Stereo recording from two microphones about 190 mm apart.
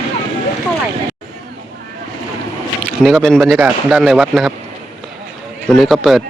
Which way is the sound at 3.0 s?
Centre (ahead or behind).